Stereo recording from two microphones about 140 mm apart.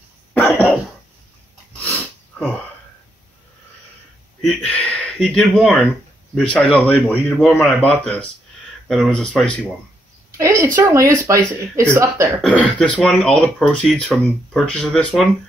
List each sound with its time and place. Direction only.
0.3 s cough: 10° left (ahead or behind)
1.8 s dog: 10° left (ahead or behind)
4.4 s speech: 10° left (ahead or behind)
8.8 s speech: centre (ahead or behind)
10.3 s speech: 20° right (ahead or behind)
12.4 s speech: 10° left (ahead or behind)